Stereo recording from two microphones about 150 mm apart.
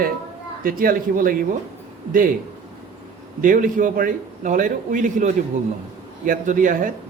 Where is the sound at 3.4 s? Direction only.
60° right (ahead or behind).